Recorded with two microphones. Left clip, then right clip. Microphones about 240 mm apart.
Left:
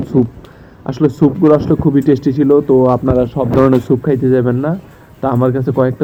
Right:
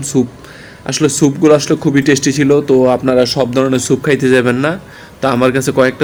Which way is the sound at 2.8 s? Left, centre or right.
Centre.